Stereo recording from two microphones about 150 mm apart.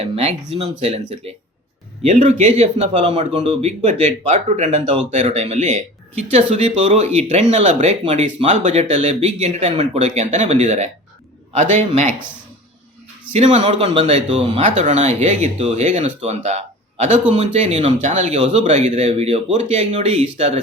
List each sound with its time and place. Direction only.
0.0 s speech: 40° right (ahead or behind)
13.3 s speech: 50° right (ahead or behind)
14.6 s speech: 55° right (ahead or behind)